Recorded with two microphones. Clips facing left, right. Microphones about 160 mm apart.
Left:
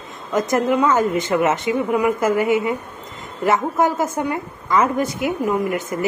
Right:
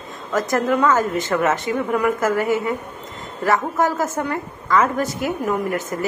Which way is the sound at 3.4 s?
20° left (ahead or behind).